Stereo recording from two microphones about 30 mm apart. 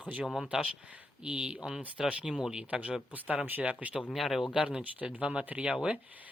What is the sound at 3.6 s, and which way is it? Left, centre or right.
Speech, right.